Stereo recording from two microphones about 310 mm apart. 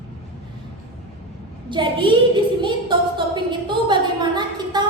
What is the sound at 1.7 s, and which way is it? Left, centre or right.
A woman's voice, centre.